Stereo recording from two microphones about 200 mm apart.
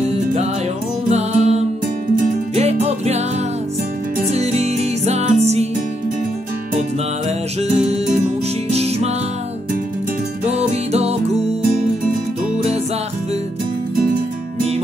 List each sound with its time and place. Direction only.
1.1 s music: 35° right (ahead or behind)
4.3 s music: 30° right (ahead or behind)
7.2 s music: 30° right (ahead or behind)
10.4 s music: 30° right (ahead or behind)